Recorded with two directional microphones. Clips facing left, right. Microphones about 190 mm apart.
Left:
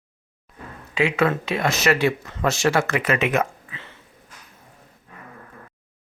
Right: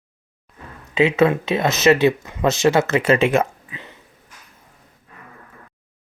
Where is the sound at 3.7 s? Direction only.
15° right (ahead or behind).